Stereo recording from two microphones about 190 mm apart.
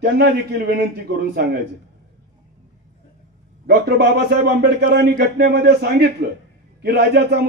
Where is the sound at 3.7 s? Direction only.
60° right (ahead or behind).